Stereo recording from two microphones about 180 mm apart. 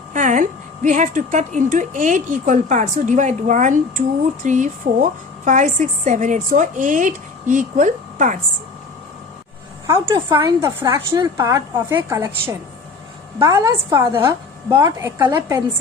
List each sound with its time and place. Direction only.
0.1 s speech: 45° right (ahead or behind)
9.8 s a woman's voice: 15° right (ahead or behind)